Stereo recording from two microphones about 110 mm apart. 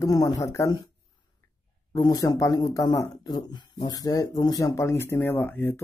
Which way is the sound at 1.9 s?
35° left (ahead or behind).